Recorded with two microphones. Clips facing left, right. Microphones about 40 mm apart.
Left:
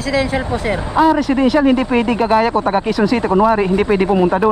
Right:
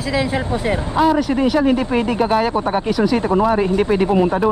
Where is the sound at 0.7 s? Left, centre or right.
Centre.